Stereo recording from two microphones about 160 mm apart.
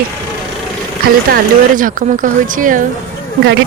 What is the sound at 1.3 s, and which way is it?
Speech, 55° right (ahead or behind).